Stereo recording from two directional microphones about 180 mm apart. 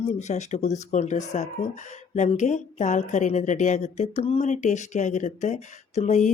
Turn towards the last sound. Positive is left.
turn(degrees=40)  # may be behind; listen again after turning